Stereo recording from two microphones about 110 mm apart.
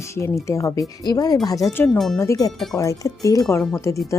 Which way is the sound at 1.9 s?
5° left (ahead or behind).